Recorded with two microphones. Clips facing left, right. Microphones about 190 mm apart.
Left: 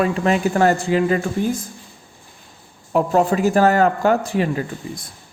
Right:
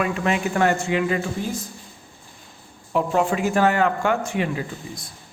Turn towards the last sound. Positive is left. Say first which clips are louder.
# left 4 dB
turn(degrees=35)  # may be behind; listen again after turning